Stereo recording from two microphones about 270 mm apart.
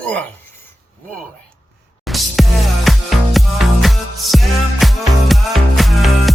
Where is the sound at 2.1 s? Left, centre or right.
Centre.